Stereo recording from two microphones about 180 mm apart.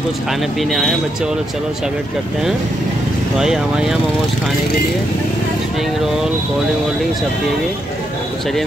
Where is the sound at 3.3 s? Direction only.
5° right (ahead or behind).